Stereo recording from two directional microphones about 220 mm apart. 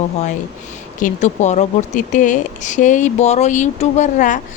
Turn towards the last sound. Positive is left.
turn(degrees=35)  # may be behind; listen again after turning